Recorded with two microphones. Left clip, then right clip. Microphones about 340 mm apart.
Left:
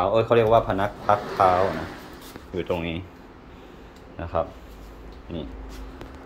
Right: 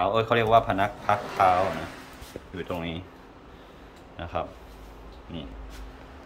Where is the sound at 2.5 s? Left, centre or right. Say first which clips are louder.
Left 6 dB; centre.